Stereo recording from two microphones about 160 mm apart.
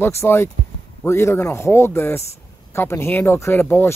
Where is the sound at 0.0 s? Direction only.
15° left (ahead or behind).